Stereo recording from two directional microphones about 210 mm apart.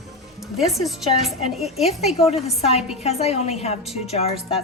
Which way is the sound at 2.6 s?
30° left (ahead or behind).